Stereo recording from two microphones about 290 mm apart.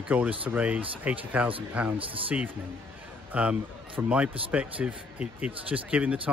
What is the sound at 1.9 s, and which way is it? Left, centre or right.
Speech, centre.